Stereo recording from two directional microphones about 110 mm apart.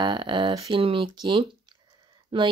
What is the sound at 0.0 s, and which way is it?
Speech, 45° right (ahead or behind).